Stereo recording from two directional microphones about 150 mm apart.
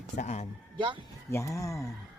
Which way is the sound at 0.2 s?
50° left (ahead or behind).